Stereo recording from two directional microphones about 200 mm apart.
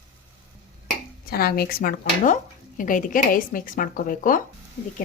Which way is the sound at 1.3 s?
50° left (ahead or behind).